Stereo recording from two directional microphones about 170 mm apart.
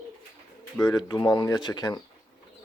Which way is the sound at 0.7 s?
20° left (ahead or behind).